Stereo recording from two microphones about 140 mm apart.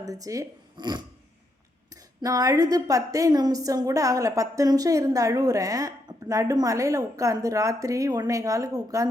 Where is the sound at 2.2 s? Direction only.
25° right (ahead or behind).